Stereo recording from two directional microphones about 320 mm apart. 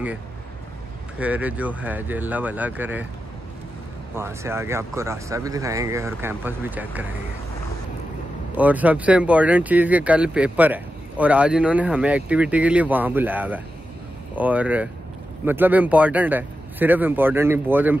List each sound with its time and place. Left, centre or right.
1.2 s speech: centre
4.1 s speech: centre
8.5 s speech: centre